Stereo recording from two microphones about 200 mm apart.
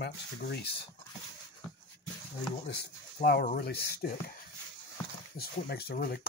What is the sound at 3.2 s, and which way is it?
Speech, 50° left (ahead or behind).